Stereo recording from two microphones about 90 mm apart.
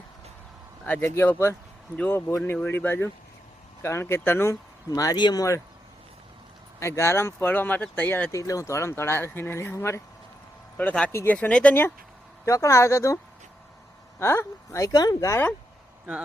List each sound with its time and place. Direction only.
0.9 s speech: 20° left (ahead or behind)
4.9 s speech: 40° left (ahead or behind)
5.1 s speech: 50° left (ahead or behind)
6.7 s speech: 30° left (ahead or behind)
8.3 s speech: 40° left (ahead or behind)
10.8 s speech: 15° left (ahead or behind)
11.1 s speech: 30° left (ahead or behind)
11.3 s speech: 15° left (ahead or behind)
12.5 s speech: 35° left (ahead or behind)
14.2 s speech: 30° left (ahead or behind)